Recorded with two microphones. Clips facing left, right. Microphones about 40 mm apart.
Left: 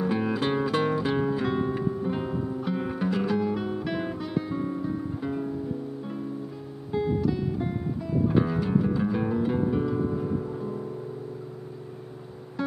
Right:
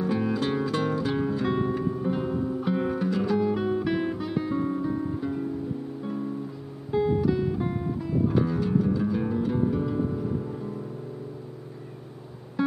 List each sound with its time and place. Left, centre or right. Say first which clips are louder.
0.0 s music: even; centre
2.6 s music: right 3 dB; centre
2.9 s guitar: right 1 dB; centre
5.2 s music: even; centre
6.9 s guitar: right 3 dB; centre
8.3 s music: left 2 dB; centre
12.6 s music: right 4 dB; centre